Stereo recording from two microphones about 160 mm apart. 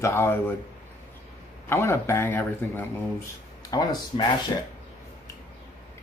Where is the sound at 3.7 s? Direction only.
25° left (ahead or behind).